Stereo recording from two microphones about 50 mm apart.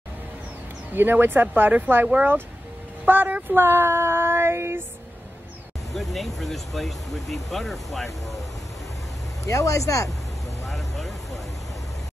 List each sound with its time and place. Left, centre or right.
0.9 s speech: right
3.1 s speech: right
5.9 s speech: centre
9.4 s speech: left
10.6 s vehicle: centre